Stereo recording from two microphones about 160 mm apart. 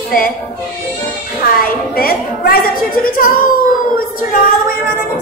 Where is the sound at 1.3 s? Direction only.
65° left (ahead or behind).